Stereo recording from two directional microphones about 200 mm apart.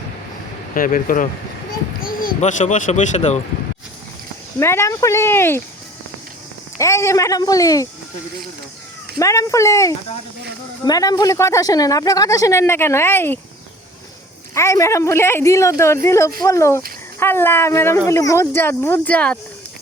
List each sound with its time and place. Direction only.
0.7 s speech: 45° left (ahead or behind)
4.6 s speech: 15° left (ahead or behind)
6.7 s speech: 15° left (ahead or behind)
9.1 s speech: 15° left (ahead or behind)
14.5 s speech: 15° left (ahead or behind)